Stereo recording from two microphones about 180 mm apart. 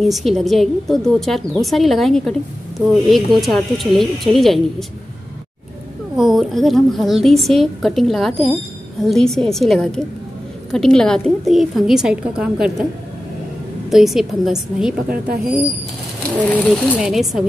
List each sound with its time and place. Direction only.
0.0 s a woman's voice: centre (ahead or behind)
6.1 s a woman's voice: centre (ahead or behind)
13.8 s a woman's voice: centre (ahead or behind)
16.4 s a woman's voice: 5° left (ahead or behind)